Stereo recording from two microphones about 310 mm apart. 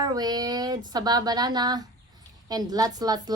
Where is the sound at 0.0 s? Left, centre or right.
Centre.